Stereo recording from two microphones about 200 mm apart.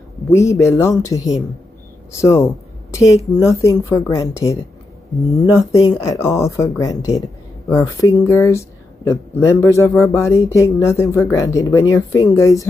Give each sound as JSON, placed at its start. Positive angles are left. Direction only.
{"t": 0.3, "sound": "a woman's voice", "side_deg": 15}